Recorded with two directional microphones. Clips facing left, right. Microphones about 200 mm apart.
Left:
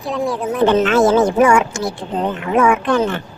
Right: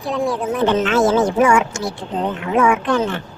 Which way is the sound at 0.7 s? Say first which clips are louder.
Left 3 dB; 55° left (ahead or behind).